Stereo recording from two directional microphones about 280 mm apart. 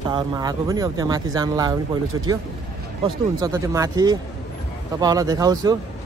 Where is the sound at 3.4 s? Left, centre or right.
Centre.